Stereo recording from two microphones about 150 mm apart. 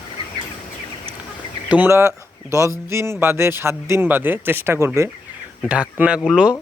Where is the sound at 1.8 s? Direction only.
20° right (ahead or behind).